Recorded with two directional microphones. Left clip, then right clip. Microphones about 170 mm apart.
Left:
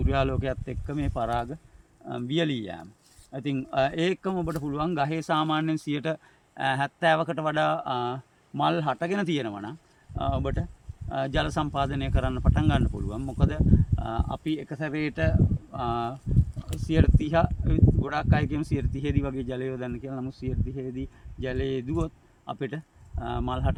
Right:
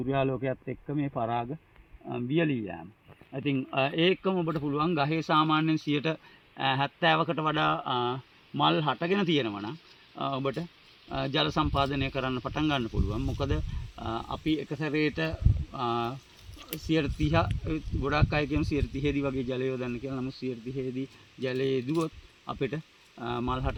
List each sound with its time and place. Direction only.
0.0 s speech: 5° left (ahead or behind)
2.0 s speech: 15° left (ahead or behind)
17.2 s speech: 10° left (ahead or behind)